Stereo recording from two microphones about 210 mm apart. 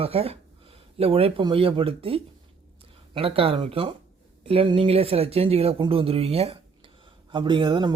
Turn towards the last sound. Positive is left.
turn(degrees=-20)  # may be behind; listen again after turning